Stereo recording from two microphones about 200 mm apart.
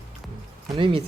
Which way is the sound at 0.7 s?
25° right (ahead or behind).